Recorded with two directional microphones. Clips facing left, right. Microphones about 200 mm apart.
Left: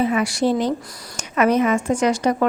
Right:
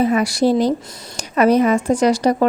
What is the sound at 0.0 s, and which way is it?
A woman's voice, 40° right (ahead or behind).